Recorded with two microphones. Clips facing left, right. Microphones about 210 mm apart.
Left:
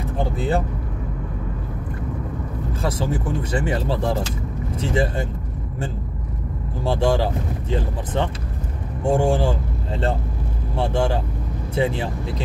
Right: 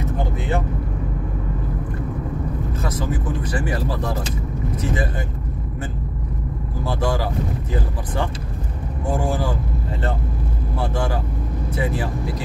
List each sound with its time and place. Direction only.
0.4 s vehicle: 35° left (ahead or behind)
2.8 s speech: 30° left (ahead or behind)
6.8 s speech: 30° left (ahead or behind)
10.8 s speech: 25° left (ahead or behind)